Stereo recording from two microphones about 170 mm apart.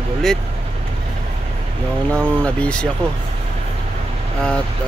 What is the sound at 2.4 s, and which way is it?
Speech, 5° left (ahead or behind).